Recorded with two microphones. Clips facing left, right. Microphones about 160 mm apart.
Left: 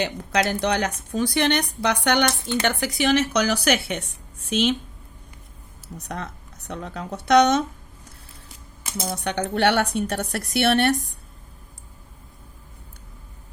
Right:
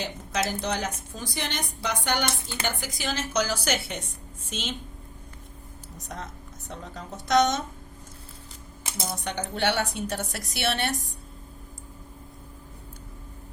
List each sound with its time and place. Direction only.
0.3 s a woman's voice: 70° left (ahead or behind)
6.0 s a woman's voice: 65° left (ahead or behind)
9.1 s a woman's voice: 70° left (ahead or behind)